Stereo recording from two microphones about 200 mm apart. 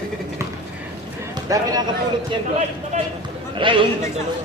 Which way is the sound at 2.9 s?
35° right (ahead or behind).